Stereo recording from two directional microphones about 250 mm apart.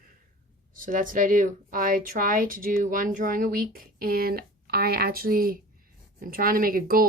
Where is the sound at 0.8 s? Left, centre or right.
Right.